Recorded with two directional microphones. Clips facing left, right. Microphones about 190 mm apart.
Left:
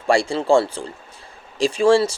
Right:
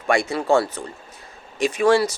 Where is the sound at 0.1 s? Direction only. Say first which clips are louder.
Left 2 dB; 30° left (ahead or behind).